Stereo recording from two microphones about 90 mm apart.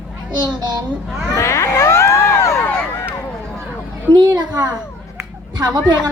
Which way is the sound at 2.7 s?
20° left (ahead or behind).